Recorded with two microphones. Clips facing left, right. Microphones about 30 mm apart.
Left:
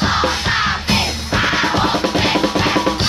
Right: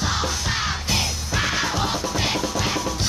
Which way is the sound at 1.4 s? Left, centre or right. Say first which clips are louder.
Left 7 dB; left.